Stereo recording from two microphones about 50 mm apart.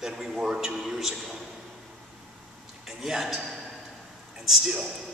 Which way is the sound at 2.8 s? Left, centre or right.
Centre.